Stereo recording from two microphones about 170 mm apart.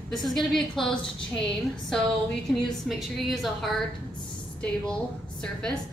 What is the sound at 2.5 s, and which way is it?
A woman's voice, centre (ahead or behind).